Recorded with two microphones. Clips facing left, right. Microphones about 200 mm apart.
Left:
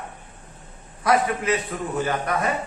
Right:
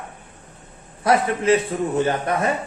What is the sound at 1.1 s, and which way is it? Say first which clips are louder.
A man's voice: right 4 dB; 30° right (ahead or behind).